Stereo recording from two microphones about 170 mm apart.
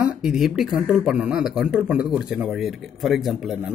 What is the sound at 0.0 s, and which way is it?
Speech, 5° right (ahead or behind).